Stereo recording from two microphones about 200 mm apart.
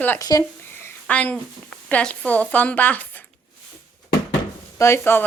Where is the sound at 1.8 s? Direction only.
5° left (ahead or behind).